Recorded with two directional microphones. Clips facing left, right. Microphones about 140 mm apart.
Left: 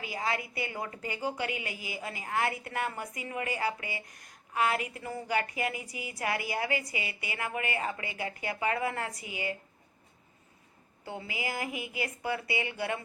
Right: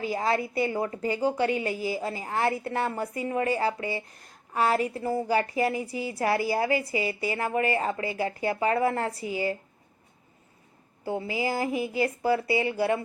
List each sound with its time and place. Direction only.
0.0 s a woman's voice: 35° right (ahead or behind)
11.0 s a woman's voice: 35° right (ahead or behind)